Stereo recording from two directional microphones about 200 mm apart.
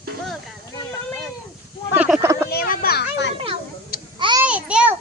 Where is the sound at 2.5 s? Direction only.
50° left (ahead or behind).